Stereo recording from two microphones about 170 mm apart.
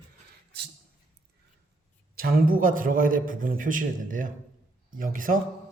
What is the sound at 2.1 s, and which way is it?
A man's voice, 60° right (ahead or behind).